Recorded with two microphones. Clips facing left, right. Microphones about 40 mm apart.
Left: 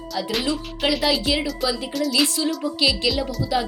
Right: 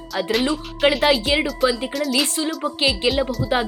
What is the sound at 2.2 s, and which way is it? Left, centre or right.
Speech, right.